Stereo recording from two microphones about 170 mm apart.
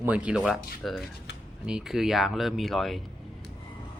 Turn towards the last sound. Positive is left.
turn(degrees=0)  # may be behind; listen again after turning